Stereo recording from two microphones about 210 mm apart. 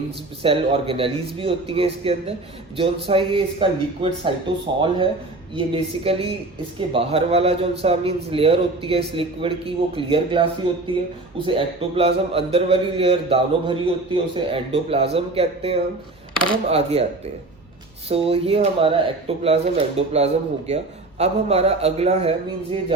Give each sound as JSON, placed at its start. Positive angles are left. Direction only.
{"t": 0.4, "sound": "a man's voice", "side_deg": -25}
{"t": 18.1, "sound": "a man's voice", "side_deg": -30}